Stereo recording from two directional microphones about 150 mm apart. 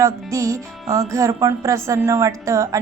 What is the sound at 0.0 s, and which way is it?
A woman's voice, 20° right (ahead or behind).